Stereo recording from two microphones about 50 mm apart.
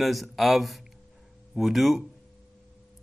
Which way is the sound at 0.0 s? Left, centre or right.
Centre.